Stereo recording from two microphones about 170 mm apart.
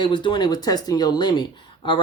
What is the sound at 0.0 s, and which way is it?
Speech, 30° left (ahead or behind).